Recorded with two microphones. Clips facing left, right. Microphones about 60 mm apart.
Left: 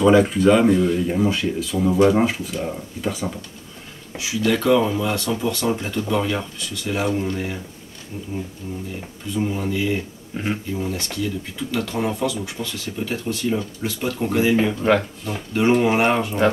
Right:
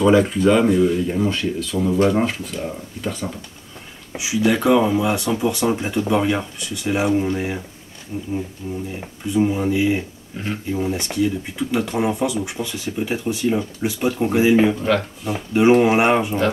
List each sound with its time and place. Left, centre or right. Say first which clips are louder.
0.0 s speech: even; centre
4.1 s speech: right 2 dB; centre
8.6 s speech: right 3 dB; centre
10.3 s speech: left 2 dB; centre
10.7 s speech: right 3 dB; centre